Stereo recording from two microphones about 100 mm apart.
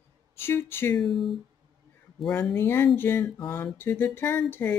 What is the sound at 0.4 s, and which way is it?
Speech, 25° left (ahead or behind).